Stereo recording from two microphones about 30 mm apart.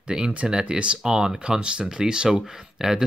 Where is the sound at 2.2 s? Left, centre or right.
Centre.